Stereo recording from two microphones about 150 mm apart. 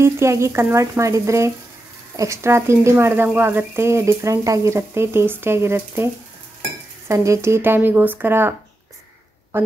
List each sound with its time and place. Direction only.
0.0 s speech: 20° right (ahead or behind)
7.1 s speech: 20° right (ahead or behind)